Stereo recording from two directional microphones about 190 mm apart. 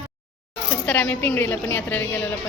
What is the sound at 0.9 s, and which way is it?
A woman's voice, 5° left (ahead or behind).